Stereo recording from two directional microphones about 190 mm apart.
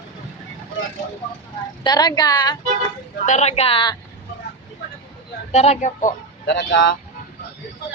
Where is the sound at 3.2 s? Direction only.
35° left (ahead or behind).